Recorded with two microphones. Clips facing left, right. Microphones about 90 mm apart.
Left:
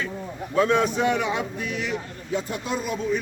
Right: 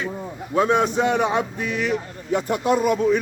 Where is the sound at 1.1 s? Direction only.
45° right (ahead or behind).